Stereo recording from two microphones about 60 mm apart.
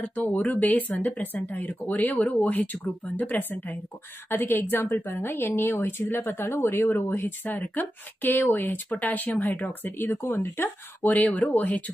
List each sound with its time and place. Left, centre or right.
0.0 s speech: centre
4.3 s speech: left
10.3 s speech: left
11.1 s speech: left